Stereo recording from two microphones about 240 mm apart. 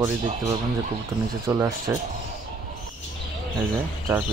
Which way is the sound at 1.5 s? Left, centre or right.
Centre.